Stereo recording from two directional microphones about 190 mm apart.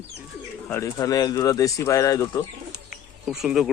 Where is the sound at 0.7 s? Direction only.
15° left (ahead or behind).